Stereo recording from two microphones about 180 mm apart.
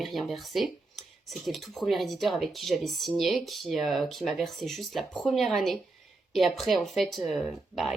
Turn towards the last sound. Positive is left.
turn(degrees=0)  # may be behind; listen again after turning